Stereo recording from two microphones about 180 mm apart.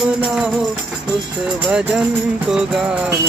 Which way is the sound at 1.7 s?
5° right (ahead or behind).